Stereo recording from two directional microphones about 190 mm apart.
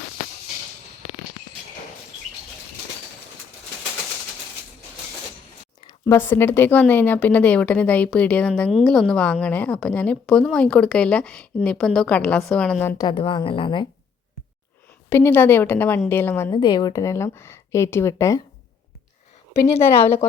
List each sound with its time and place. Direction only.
5.8 s a woman's voice: 15° left (ahead or behind)
13.0 s a woman's voice: 25° left (ahead or behind)
15.1 s a woman's voice: 10° left (ahead or behind)
16.5 s a woman's voice: 25° left (ahead or behind)